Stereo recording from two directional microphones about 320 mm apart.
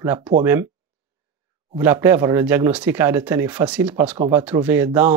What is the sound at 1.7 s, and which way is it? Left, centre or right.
Speech, centre.